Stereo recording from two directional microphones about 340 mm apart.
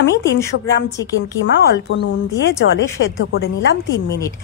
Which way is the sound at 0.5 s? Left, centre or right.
Left.